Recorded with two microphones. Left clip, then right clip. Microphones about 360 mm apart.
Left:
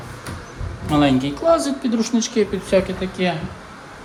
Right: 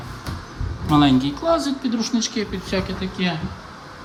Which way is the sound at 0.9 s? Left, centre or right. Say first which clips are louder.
Even; centre.